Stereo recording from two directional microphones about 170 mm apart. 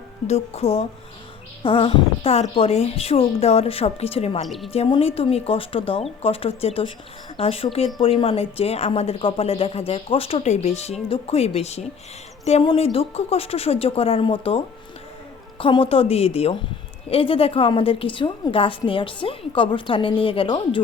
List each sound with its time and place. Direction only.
0.3 s speech: 40° left (ahead or behind)
4.4 s a woman's voice: centre (ahead or behind)
4.7 s speech: 35° left (ahead or behind)